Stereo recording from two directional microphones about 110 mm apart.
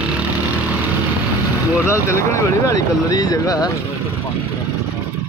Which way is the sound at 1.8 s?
25° left (ahead or behind).